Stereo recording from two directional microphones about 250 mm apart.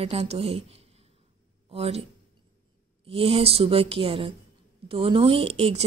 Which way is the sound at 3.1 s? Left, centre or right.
Right.